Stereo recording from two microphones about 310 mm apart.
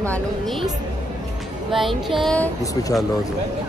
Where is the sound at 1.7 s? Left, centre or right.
Centre.